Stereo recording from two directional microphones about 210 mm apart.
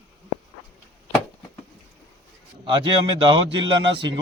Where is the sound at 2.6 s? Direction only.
20° right (ahead or behind).